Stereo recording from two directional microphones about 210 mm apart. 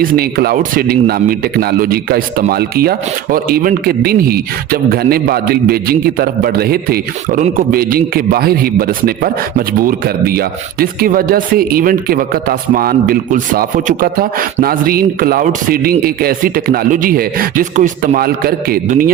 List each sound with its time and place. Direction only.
0.0 s a man's voice: 45° right (ahead or behind)